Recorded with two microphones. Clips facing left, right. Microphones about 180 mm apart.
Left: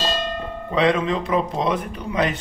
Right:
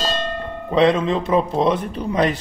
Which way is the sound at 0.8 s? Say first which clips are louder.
Right 1 dB; 25° right (ahead or behind).